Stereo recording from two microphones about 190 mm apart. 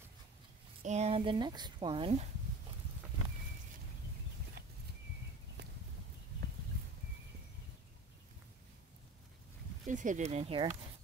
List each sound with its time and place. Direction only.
0.8 s a woman's voice: 35° right (ahead or behind)
4.6 s horse: 60° right (ahead or behind)
5.6 s walk: 60° right (ahead or behind)
9.8 s speech: 40° right (ahead or behind)